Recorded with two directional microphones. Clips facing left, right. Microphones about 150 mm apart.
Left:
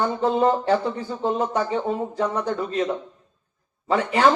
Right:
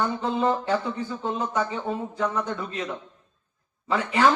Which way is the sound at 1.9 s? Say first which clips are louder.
Left 3 dB; 50° left (ahead or behind).